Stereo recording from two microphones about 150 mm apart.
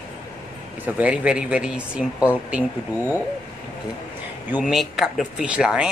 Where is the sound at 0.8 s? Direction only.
10° right (ahead or behind).